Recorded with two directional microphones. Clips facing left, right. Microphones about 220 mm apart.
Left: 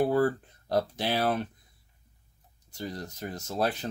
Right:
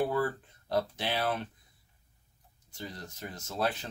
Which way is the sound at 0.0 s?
40° left (ahead or behind).